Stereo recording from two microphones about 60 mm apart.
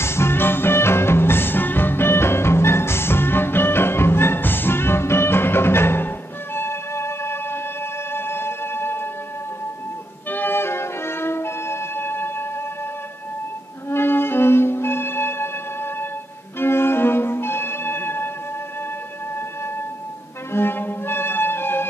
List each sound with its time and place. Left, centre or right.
0.0 s music: left
10.3 s music: left
13.8 s music: left
20.5 s music: left